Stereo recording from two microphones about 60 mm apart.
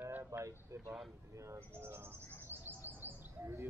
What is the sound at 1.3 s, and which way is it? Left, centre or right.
Speech, right.